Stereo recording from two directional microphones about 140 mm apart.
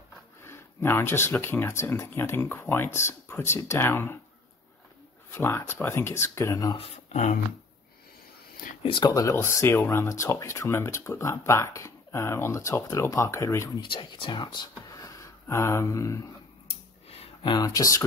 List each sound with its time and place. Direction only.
0.4 s speech: 15° left (ahead or behind)
5.3 s speech: 15° left (ahead or behind)
6.8 s speech: 55° left (ahead or behind)
8.8 s speech: 35° left (ahead or behind)
9.1 s speech: 20° left (ahead or behind)
13.8 s speech: 40° left (ahead or behind); by 16.2 s 20° left (ahead or behind)
16.6 s a sound: 45° left (ahead or behind)
17.6 s speech: 25° left (ahead or behind)